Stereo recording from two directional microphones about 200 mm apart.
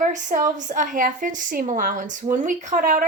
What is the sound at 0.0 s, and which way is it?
A woman's voice, 40° right (ahead or behind).